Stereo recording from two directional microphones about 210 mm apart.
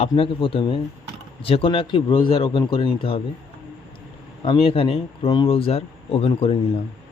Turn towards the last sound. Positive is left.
turn(degrees=30)  # may be behind; listen again after turning